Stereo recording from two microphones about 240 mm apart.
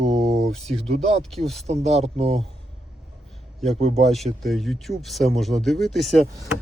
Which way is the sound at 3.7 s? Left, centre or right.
Right.